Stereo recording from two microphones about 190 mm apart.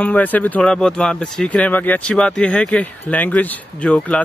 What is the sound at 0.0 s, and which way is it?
Speech, 10° left (ahead or behind).